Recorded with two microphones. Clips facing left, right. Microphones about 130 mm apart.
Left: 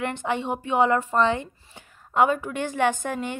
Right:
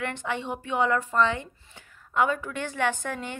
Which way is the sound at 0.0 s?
15° left (ahead or behind).